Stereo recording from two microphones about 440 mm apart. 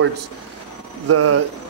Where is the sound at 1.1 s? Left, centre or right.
Right.